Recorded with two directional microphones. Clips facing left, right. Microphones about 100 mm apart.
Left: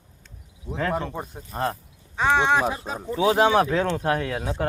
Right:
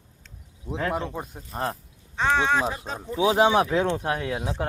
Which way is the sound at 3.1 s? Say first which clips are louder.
Left 1 dB; 15° right (ahead or behind).